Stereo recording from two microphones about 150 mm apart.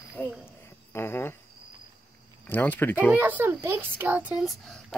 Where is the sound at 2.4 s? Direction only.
10° left (ahead or behind).